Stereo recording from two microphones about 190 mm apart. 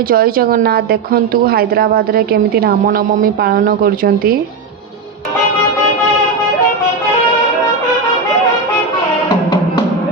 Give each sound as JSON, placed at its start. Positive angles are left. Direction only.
{"t": 0.1, "sound": "a woman's voice", "side_deg": -50}